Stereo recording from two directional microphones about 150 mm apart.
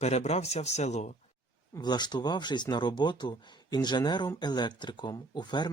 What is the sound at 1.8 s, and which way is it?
Speech, 30° left (ahead or behind).